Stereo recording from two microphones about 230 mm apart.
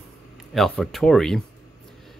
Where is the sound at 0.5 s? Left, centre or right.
Centre.